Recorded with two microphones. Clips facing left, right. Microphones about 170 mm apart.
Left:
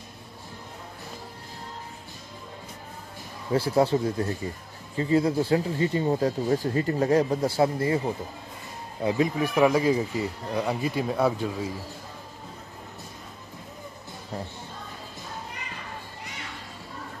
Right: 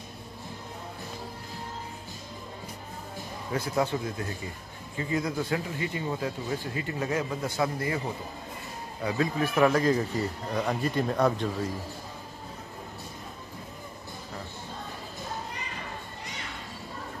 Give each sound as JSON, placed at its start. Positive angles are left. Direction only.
{"t": 3.5, "sound": "speech", "side_deg": 30}
{"t": 9.0, "sound": "speech", "side_deg": 20}